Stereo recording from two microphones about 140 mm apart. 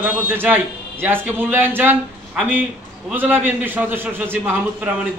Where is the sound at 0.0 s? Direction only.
15° right (ahead or behind).